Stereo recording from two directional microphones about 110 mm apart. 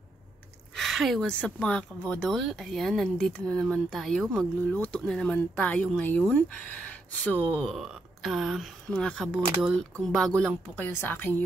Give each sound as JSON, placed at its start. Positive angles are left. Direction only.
{"t": 0.7, "sound": "a sound", "side_deg": 0}
{"t": 1.2, "sound": "speech", "side_deg": 10}
{"t": 4.6, "sound": "speech", "side_deg": 10}
{"t": 7.5, "sound": "speech", "side_deg": 0}
{"t": 8.8, "sound": "speech", "side_deg": 10}
{"t": 10.8, "sound": "a woman's voice", "side_deg": 20}